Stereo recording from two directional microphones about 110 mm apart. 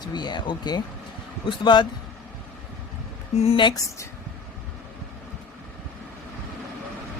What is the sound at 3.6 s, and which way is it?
Speech, 30° left (ahead or behind).